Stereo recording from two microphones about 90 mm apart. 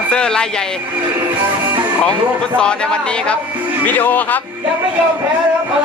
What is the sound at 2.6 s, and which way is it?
A man's voice, 10° left (ahead or behind).